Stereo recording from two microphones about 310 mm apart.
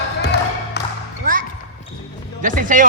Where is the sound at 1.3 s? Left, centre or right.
Right.